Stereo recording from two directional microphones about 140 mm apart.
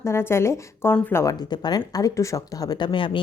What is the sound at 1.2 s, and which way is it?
A woman's voice, 25° left (ahead or behind).